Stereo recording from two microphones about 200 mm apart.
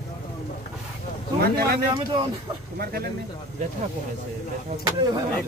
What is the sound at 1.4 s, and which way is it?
Speech, 50° right (ahead or behind).